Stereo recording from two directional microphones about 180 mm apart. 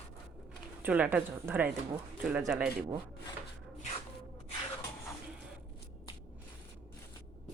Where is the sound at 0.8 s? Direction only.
10° right (ahead or behind).